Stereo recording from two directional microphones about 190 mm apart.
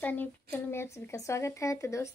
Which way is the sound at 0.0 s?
10° left (ahead or behind).